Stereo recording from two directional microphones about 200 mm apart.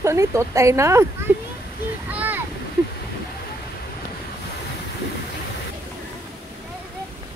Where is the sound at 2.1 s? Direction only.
10° right (ahead or behind).